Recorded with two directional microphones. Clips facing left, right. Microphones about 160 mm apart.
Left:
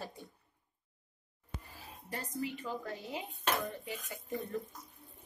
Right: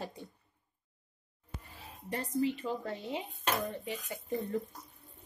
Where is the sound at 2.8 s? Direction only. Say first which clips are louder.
Right 4 dB; 30° right (ahead or behind).